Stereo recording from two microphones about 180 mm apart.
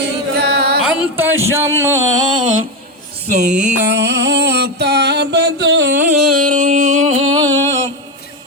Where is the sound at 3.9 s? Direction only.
70° right (ahead or behind).